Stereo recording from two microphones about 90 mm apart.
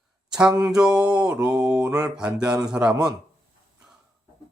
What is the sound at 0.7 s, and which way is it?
Mantra, 10° right (ahead or behind).